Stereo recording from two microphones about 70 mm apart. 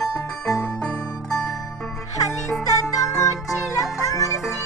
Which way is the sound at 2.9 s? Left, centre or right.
Left.